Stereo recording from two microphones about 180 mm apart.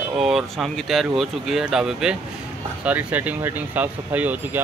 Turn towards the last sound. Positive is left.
turn(degrees=-10)  # may be behind; listen again after turning